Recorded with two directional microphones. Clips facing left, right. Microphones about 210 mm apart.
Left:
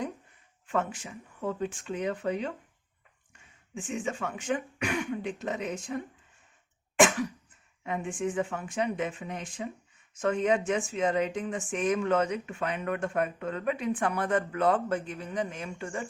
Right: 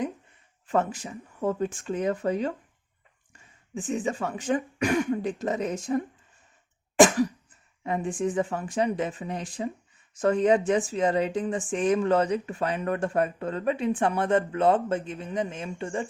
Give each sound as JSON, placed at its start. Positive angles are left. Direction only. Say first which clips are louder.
{"t": 0.7, "sound": "speech", "louder": "right 5 dB", "side_deg": -40}
{"t": 3.8, "sound": "speech", "louder": "right 5 dB", "side_deg": -40}
{"t": 6.9, "sound": "cough", "louder": "right 5 dB", "side_deg": -35}
{"t": 7.9, "sound": "speech", "louder": "right 4 dB", "side_deg": -35}